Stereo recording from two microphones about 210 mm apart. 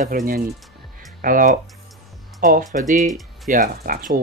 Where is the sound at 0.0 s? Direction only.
40° right (ahead or behind).